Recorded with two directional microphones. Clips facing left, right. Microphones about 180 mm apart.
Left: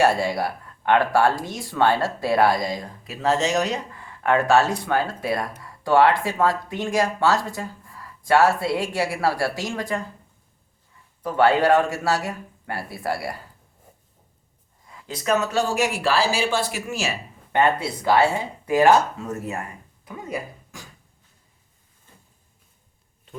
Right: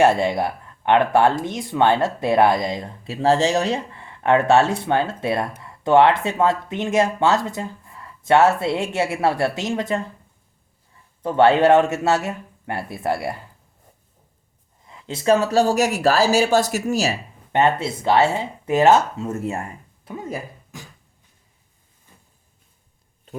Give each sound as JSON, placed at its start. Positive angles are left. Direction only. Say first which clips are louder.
{"t": 0.0, "sound": "speech", "louder": "right 3 dB", "side_deg": -20}
{"t": 11.2, "sound": "speech", "louder": "right 3 dB", "side_deg": -25}
{"t": 14.8, "sound": "speech", "louder": "right 6 dB", "side_deg": -25}
{"t": 17.5, "sound": "speech", "louder": "right 2 dB", "side_deg": -25}
{"t": 20.1, "sound": "a sound", "louder": "right 1 dB", "side_deg": -25}